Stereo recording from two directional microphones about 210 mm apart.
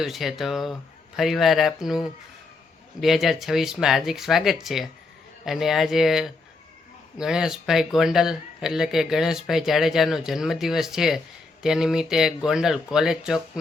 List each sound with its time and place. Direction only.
0.0 s speech: centre (ahead or behind)